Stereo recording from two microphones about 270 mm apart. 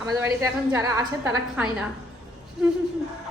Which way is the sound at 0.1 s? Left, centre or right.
Centre.